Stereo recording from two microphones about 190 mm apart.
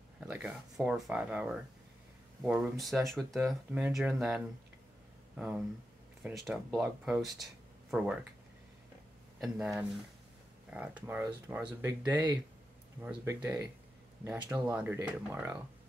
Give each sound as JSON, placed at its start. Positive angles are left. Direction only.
{"t": 0.3, "sound": "speech", "side_deg": -5}
{"t": 5.4, "sound": "speech", "side_deg": -5}
{"t": 9.4, "sound": "speech", "side_deg": 0}